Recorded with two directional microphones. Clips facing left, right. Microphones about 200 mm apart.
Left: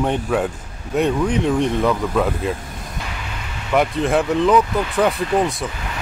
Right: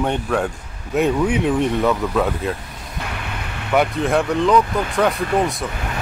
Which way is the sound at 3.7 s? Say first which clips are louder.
Even; centre (ahead or behind).